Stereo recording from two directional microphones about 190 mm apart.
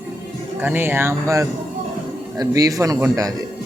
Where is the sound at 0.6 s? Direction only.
10° right (ahead or behind).